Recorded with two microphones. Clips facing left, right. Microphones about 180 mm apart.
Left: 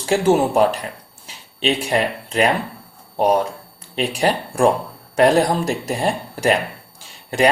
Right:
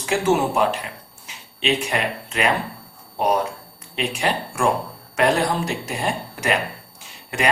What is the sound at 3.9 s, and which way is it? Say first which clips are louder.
Speech: left 4 dB; 35° left (ahead or behind).